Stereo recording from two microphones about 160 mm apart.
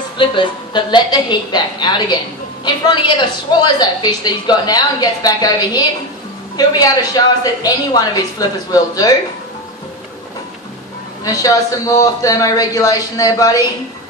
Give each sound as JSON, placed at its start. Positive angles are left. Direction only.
{"t": 0.2, "sound": "a woman's voice", "side_deg": 30}
{"t": 11.2, "sound": "a woman's voice", "side_deg": 20}